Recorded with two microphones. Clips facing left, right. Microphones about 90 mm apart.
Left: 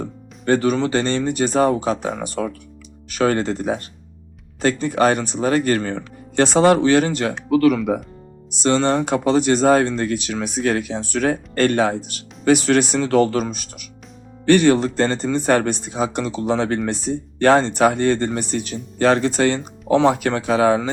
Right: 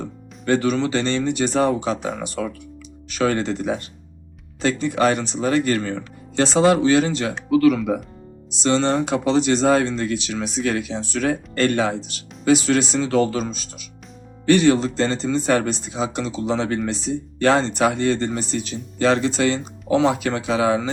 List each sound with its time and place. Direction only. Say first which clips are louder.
0.0 s speech: left 3 dB; 40° left (ahead or behind)